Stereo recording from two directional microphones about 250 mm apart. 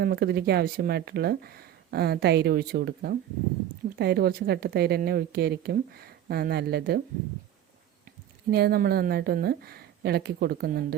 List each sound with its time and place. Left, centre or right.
0.0 s speech: right
8.4 s speech: right